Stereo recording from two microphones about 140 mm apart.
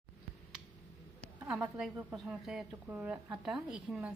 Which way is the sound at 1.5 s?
5° right (ahead or behind).